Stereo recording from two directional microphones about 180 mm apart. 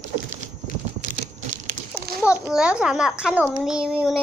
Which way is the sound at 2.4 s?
5° right (ahead or behind).